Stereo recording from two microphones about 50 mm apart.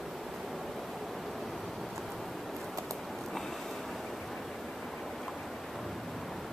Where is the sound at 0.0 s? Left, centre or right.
Centre.